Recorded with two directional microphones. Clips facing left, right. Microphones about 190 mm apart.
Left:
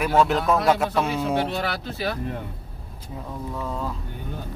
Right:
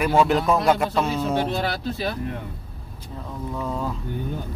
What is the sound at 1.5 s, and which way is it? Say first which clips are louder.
Speech: right 2 dB; 35° right (ahead or behind).